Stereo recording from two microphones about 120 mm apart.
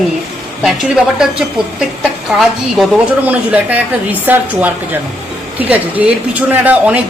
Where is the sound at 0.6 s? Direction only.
5° right (ahead or behind).